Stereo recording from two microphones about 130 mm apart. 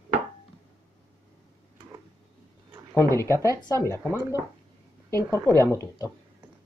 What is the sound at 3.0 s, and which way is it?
Speech, 20° left (ahead or behind).